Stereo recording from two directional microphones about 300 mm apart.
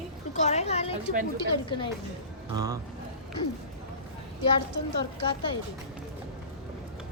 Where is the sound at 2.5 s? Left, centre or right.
Centre.